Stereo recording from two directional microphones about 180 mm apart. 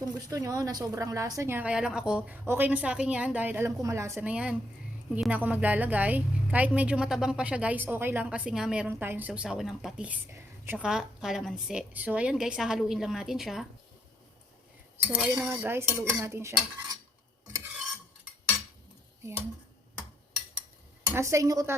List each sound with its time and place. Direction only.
0.0 s a woman's voice: 20° right (ahead or behind); by 13.7 s centre (ahead or behind)
15.0 s a woman's voice: 5° right (ahead or behind)
19.2 s a woman's voice: 15° right (ahead or behind)
21.1 s a woman's voice: 15° right (ahead or behind)